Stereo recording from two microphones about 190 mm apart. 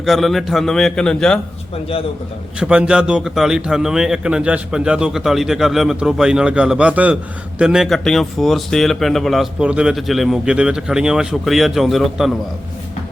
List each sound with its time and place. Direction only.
0.0 s speech: centre (ahead or behind)
1.7 s a man's voice: 30° left (ahead or behind)
2.6 s speech: 5° right (ahead or behind)